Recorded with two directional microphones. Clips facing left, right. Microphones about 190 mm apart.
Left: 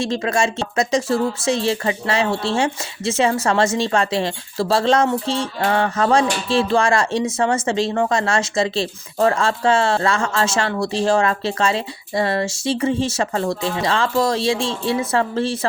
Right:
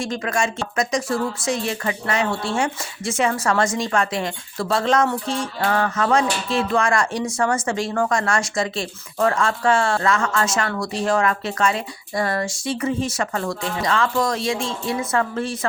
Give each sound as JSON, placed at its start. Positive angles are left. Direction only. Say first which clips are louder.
{"t": 0.0, "sound": "speech", "louder": "left 3 dB", "side_deg": 25}